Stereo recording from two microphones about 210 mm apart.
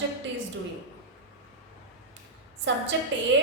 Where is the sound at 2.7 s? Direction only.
60° right (ahead or behind).